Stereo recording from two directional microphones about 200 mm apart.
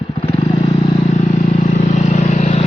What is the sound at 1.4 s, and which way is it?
Vehicle, 35° left (ahead or behind).